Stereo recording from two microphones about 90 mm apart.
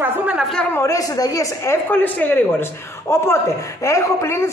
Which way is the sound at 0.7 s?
35° left (ahead or behind).